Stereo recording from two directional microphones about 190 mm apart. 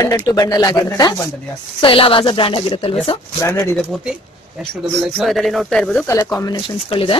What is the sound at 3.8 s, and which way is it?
Speech, 5° right (ahead or behind).